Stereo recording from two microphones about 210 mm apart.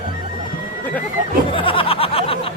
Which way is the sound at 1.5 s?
25° left (ahead or behind).